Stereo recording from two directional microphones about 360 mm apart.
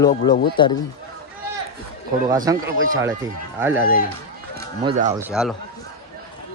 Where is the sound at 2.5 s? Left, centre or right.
Centre.